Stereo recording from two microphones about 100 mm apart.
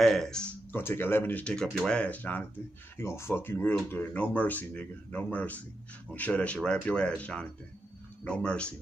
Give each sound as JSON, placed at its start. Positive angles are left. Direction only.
{"t": 0.0, "sound": "speech", "side_deg": 5}
{"t": 0.7, "sound": "speech", "side_deg": 20}
{"t": 3.0, "sound": "speech", "side_deg": 25}